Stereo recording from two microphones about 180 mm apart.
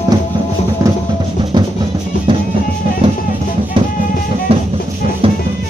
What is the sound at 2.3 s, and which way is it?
Music, 25° right (ahead or behind).